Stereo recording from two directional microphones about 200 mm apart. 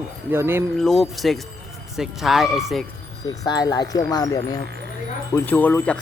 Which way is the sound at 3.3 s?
20° left (ahead or behind).